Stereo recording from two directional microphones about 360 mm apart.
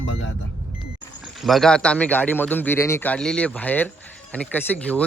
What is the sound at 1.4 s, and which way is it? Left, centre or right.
A man's voice, centre.